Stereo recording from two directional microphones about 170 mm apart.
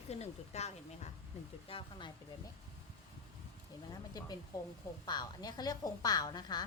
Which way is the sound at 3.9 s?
20° left (ahead or behind).